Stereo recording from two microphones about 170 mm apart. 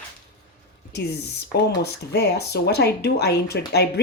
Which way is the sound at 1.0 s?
70° left (ahead or behind).